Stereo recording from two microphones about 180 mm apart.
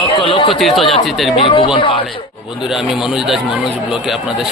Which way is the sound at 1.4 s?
30° left (ahead or behind).